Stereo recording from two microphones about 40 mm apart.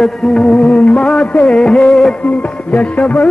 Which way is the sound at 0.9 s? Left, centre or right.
Centre.